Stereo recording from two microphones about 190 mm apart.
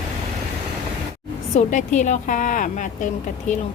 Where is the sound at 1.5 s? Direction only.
40° left (ahead or behind).